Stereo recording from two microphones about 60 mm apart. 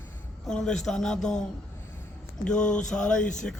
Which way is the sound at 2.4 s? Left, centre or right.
Centre.